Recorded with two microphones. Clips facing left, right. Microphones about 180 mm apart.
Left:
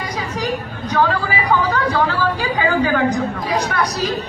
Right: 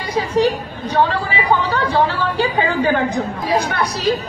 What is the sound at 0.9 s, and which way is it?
Speech, 30° right (ahead or behind).